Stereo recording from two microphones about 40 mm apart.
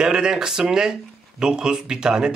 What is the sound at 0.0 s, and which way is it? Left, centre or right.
Speech, centre.